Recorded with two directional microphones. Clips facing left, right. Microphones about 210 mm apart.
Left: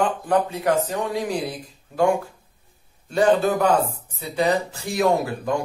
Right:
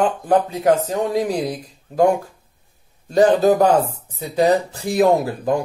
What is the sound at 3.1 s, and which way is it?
Speech, 40° right (ahead or behind).